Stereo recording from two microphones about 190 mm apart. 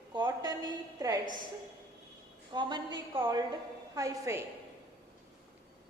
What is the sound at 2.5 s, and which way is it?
A woman's voice, 25° right (ahead or behind).